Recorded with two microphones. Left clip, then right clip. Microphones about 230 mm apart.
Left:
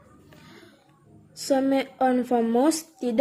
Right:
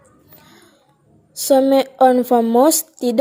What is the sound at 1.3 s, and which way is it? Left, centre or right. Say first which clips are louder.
A woman's voice: right 10 dB; right.